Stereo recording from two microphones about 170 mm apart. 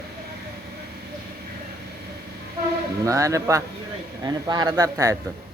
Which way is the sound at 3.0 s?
20° right (ahead or behind).